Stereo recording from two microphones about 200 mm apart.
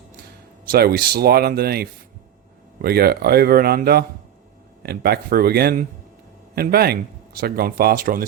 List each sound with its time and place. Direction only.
0.7 s speech: 50° right (ahead or behind)